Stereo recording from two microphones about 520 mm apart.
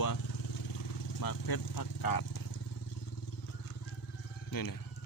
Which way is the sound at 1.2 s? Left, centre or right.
Left.